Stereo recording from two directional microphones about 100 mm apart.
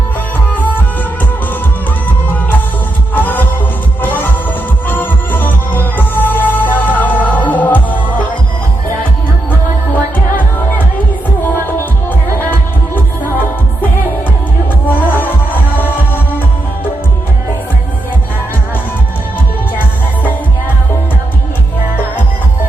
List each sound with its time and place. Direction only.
3.2 s music: 20° left (ahead or behind)
14.8 s music: 20° left (ahead or behind)